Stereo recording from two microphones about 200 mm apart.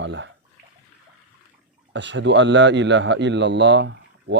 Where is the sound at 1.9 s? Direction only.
65° right (ahead or behind).